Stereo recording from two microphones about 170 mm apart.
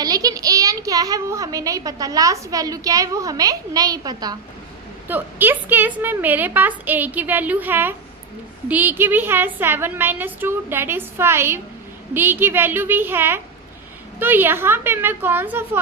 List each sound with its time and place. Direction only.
0.0 s a child's voice: 20° right (ahead or behind)
5.0 s a woman's voice: 10° right (ahead or behind)